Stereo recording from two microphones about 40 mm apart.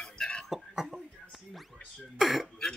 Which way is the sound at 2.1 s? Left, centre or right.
Centre.